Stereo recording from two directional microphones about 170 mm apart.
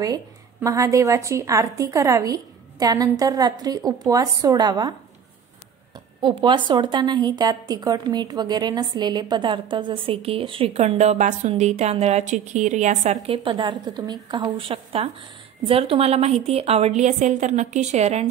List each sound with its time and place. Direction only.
0.6 s a woman's voice: 20° right (ahead or behind)
6.2 s a woman's voice: 30° right (ahead or behind)